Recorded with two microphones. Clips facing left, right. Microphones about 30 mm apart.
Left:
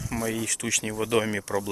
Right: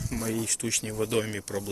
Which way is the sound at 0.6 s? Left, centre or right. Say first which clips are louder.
Left 5 dB; left.